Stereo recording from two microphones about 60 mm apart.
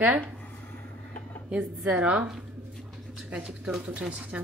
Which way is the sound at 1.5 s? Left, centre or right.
Centre.